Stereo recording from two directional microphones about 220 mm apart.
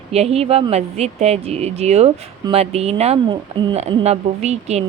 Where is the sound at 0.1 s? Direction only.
30° right (ahead or behind).